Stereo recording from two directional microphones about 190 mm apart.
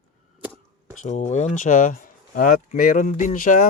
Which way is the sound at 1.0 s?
35° left (ahead or behind).